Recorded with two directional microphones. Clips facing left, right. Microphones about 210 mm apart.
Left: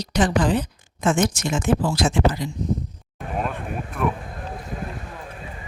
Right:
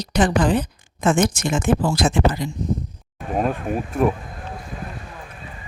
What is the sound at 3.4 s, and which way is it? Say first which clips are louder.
Speech: right 6 dB; 35° right (ahead or behind).